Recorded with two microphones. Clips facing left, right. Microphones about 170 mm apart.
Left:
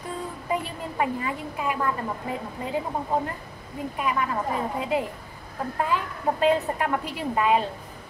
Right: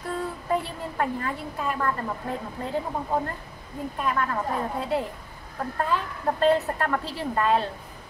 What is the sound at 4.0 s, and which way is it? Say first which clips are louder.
A woman's voice: even; 10° left (ahead or behind).